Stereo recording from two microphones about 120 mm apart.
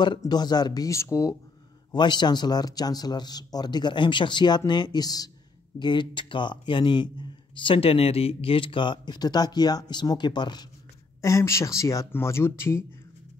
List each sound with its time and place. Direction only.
0.2 s speech: 35° left (ahead or behind)
1.9 s speech: 40° left (ahead or behind)
11.1 s speech: 25° left (ahead or behind)